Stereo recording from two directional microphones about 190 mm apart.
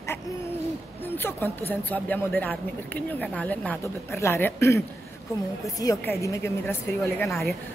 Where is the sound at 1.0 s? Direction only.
10° left (ahead or behind).